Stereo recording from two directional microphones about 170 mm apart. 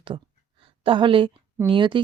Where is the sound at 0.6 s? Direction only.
30° right (ahead or behind).